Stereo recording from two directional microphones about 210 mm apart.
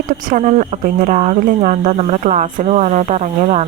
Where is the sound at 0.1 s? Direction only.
35° right (ahead or behind).